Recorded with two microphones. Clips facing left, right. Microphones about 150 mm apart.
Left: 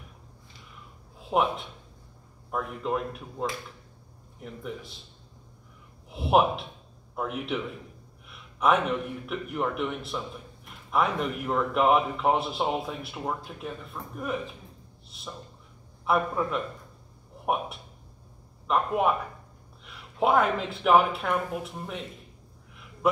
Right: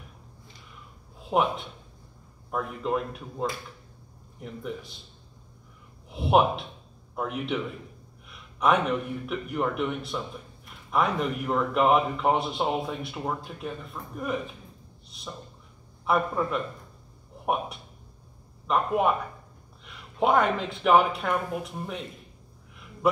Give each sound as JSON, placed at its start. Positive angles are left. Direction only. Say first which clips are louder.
{"t": 1.2, "sound": "a man's voice", "louder": "right 1 dB", "side_deg": 0}
{"t": 6.0, "sound": "a man's voice", "louder": "right 1 dB", "side_deg": 0}
{"t": 18.7, "sound": "a man's voice", "louder": "right 1 dB", "side_deg": 0}